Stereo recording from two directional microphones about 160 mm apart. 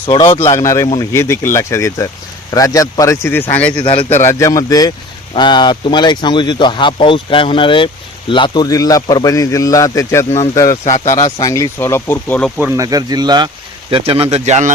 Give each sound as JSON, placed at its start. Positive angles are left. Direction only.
{"t": 0.0, "sound": "speech", "side_deg": 30}
{"t": 0.5, "sound": "speech", "side_deg": 20}
{"t": 3.8, "sound": "speech", "side_deg": 35}
{"t": 4.2, "sound": "speech", "side_deg": 20}
{"t": 12.5, "sound": "speech", "side_deg": -10}
{"t": 12.8, "sound": "speech", "side_deg": -20}